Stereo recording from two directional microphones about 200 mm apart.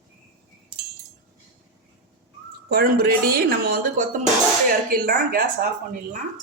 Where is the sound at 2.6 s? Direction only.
50° right (ahead or behind).